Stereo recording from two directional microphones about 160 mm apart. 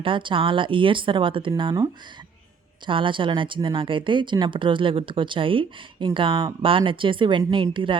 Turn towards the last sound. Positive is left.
turn(degrees=-30)  # may be behind; listen again after turning